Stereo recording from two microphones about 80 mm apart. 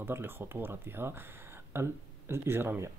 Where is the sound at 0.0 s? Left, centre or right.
Right.